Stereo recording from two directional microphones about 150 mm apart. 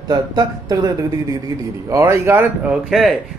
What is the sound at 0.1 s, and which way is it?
Speech, 25° right (ahead or behind).